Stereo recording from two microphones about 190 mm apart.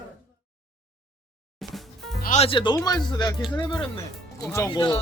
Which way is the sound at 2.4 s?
25° left (ahead or behind).